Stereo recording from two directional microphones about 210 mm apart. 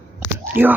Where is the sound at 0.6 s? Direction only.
10° right (ahead or behind).